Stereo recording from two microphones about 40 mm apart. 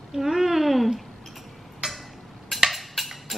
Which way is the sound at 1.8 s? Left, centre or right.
Right.